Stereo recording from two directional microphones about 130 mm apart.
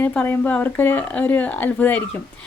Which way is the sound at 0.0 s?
15° left (ahead or behind).